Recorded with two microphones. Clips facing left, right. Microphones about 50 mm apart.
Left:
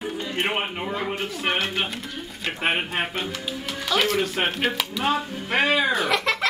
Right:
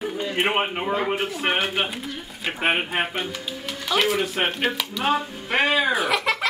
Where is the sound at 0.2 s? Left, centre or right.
Centre.